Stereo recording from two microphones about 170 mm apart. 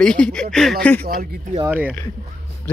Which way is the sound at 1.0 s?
60° right (ahead or behind).